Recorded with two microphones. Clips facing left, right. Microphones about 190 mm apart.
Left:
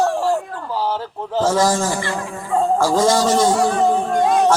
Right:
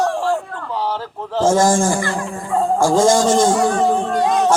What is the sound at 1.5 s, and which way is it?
A man's voice, 50° right (ahead or behind).